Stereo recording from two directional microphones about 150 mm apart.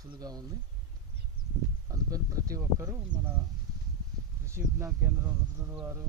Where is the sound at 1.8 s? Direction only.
25° right (ahead or behind).